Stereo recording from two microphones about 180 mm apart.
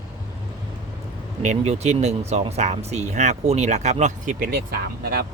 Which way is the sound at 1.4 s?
40° right (ahead or behind).